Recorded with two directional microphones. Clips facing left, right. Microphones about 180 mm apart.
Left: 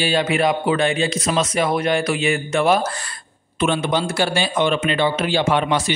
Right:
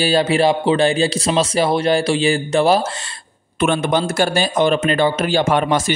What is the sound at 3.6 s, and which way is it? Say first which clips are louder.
A man's voice: right 3 dB; 50° right (ahead or behind).